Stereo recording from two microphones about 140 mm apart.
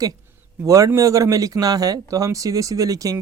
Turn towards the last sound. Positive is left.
turn(degrees=-25)  # may be behind; listen again after turning